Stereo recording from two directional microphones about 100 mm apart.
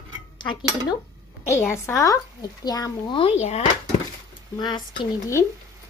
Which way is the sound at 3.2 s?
90° left.